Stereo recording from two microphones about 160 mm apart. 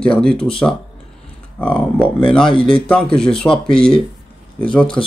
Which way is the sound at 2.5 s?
35° left (ahead or behind).